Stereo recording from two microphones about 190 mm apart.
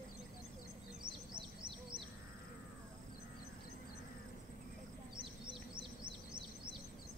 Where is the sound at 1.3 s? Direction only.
25° right (ahead or behind).